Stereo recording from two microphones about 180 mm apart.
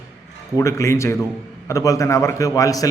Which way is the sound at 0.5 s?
15° left (ahead or behind).